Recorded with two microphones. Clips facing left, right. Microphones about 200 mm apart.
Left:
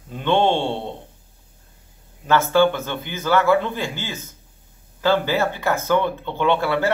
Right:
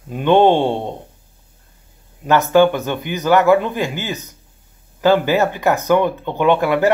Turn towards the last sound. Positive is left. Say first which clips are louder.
# right 5 dB
turn(degrees=-15)  # may be behind; listen again after turning